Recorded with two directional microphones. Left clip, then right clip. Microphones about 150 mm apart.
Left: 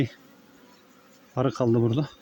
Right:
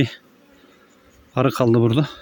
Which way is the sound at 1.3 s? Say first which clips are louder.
Right 6 dB; 65° right (ahead or behind).